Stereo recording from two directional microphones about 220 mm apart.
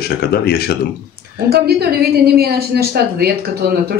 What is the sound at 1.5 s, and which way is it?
A woman's voice, 45° right (ahead or behind).